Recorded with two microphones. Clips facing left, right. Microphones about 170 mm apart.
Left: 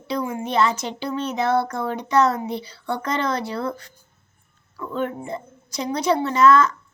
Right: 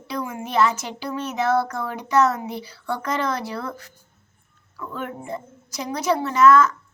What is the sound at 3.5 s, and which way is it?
Speech, 30° left (ahead or behind).